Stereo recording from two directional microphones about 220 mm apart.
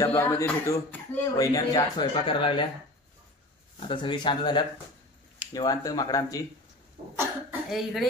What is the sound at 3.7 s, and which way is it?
Speech, 25° left (ahead or behind).